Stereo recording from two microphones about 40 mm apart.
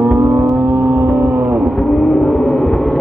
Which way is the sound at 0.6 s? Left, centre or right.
Right.